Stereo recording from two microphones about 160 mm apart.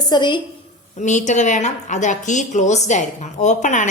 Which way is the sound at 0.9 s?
50° left (ahead or behind).